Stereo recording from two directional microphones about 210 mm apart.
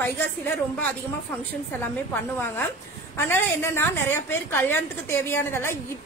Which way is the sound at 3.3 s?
10° left (ahead or behind).